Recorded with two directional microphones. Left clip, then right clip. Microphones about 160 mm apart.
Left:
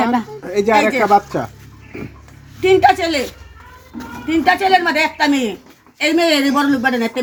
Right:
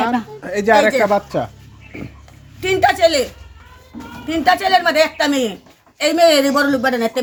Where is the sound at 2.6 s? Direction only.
25° right (ahead or behind).